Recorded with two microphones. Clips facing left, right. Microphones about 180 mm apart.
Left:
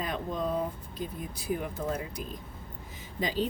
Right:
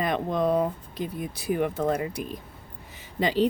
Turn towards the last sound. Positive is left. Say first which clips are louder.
# right 6 dB
turn(degrees=-70)  # may be behind; listen again after turning